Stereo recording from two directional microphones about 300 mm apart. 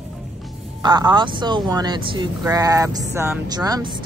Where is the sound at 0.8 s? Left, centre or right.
Centre.